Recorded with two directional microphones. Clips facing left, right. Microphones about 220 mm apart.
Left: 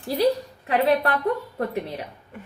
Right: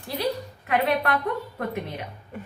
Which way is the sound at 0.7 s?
30° left (ahead or behind).